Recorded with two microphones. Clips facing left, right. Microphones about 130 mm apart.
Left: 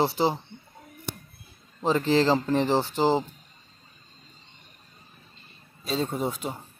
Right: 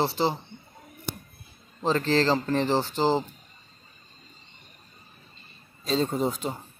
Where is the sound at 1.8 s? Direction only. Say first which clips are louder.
Left 1 dB; 15° left (ahead or behind).